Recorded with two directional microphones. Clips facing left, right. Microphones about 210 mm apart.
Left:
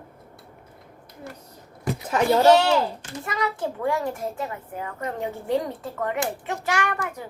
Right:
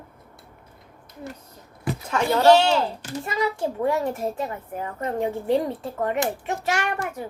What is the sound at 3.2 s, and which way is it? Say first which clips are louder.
A woman's voice: right 2 dB; 25° right (ahead or behind).